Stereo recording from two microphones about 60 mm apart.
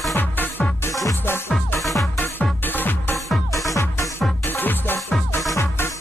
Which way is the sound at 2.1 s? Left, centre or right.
Left.